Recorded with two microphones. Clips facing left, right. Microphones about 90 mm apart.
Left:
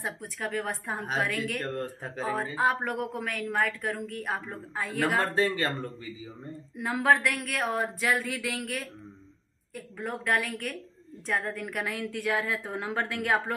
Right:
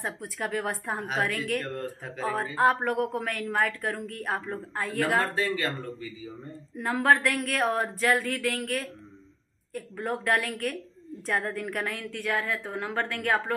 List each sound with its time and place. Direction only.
0.0 s speech: centre (ahead or behind)
5.3 s speech: 30° left (ahead or behind)
6.8 s speech: 5° left (ahead or behind)
11.9 s a woman's voice: 15° left (ahead or behind)